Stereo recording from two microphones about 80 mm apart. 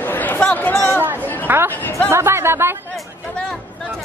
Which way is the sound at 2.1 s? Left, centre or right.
Right.